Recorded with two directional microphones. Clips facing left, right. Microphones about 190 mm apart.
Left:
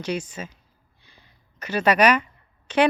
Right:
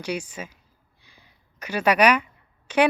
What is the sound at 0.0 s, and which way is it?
A woman's voice, 10° right (ahead or behind).